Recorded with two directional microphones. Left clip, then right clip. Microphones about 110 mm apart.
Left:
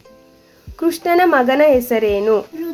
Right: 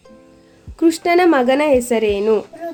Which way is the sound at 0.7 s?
40° right (ahead or behind).